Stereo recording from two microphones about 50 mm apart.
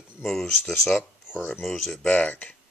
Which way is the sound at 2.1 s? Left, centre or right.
Left.